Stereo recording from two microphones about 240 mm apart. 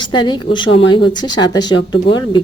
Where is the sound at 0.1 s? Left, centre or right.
Centre.